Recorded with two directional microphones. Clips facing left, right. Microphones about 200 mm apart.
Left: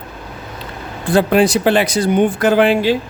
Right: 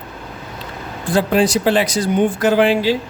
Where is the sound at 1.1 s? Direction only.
60° left (ahead or behind).